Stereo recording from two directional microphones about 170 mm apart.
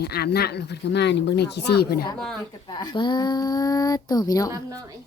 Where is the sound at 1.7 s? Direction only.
70° left (ahead or behind).